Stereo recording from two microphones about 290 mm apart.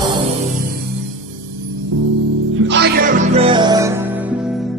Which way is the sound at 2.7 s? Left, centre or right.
Right.